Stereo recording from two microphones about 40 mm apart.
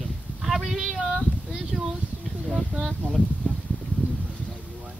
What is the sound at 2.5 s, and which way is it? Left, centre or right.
Speech, left.